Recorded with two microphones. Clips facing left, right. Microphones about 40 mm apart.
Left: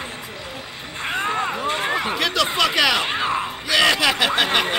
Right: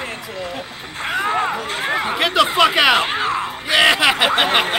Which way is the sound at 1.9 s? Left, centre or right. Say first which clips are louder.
Right 4 dB; centre.